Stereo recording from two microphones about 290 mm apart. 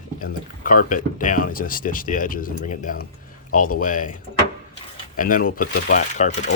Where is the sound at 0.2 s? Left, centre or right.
Left.